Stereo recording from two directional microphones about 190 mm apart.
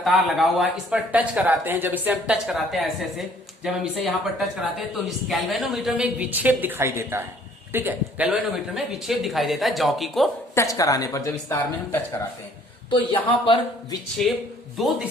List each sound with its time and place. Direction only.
0.0 s a woman's voice: centre (ahead or behind)
10.5 s a woman's voice: 15° left (ahead or behind)
12.9 s speech: 25° left (ahead or behind)
14.2 s speech: centre (ahead or behind)